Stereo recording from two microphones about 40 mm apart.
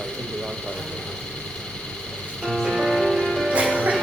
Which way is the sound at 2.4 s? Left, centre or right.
Centre.